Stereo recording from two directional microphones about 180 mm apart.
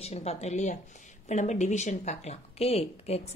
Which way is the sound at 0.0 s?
35° left (ahead or behind).